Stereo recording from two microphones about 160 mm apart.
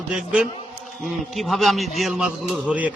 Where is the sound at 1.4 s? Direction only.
Centre (ahead or behind).